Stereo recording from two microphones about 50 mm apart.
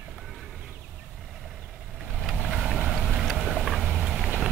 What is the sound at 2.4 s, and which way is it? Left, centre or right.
Boat, centre.